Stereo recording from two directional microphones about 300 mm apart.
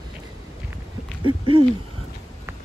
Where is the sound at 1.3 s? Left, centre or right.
Centre.